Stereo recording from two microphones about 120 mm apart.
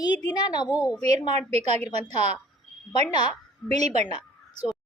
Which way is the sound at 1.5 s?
65° right (ahead or behind).